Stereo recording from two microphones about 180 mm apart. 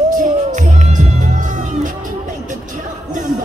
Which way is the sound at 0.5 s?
40° right (ahead or behind).